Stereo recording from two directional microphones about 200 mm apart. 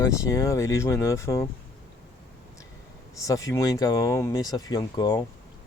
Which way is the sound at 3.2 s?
15° left (ahead or behind).